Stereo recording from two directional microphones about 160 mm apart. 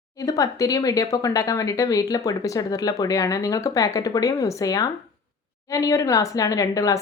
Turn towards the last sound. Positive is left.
turn(degrees=20)  # may be behind; listen again after turning